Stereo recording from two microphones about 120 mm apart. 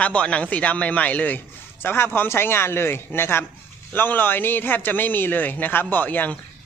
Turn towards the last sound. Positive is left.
turn(degrees=15)  # may be behind; listen again after turning